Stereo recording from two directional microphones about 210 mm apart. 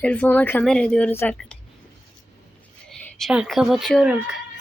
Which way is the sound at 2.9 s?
Centre (ahead or behind).